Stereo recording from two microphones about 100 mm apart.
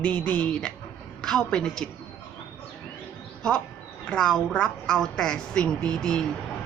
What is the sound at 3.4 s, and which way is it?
A woman's voice, 10° left (ahead or behind).